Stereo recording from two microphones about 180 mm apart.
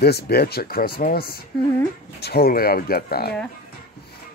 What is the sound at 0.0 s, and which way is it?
Speech, 60° left (ahead or behind).